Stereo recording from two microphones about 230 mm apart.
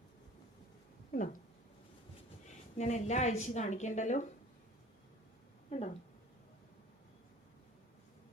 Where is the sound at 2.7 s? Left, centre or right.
Left.